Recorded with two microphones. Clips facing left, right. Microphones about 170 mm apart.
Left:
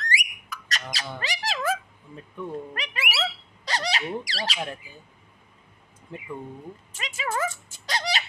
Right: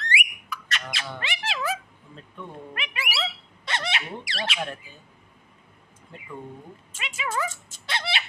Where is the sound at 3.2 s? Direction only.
35° left (ahead or behind).